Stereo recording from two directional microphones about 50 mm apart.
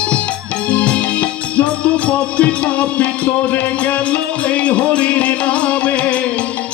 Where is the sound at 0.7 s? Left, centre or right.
Left.